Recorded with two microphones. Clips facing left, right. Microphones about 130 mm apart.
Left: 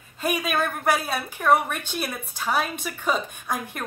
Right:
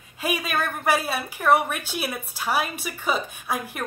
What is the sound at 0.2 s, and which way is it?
A woman's voice, centre (ahead or behind).